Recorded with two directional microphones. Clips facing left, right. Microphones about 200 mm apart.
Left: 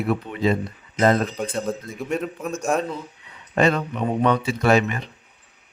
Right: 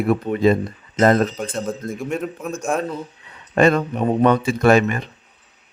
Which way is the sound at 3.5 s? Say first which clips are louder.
Right 4 dB; 50° right (ahead or behind).